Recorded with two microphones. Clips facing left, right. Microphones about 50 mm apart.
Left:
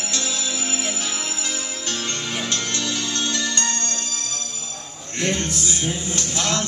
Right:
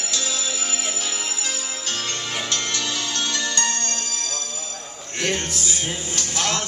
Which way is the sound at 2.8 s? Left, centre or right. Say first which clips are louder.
Left 1 dB; right.